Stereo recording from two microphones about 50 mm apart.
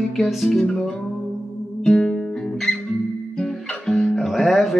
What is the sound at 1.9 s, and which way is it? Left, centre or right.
Music, centre.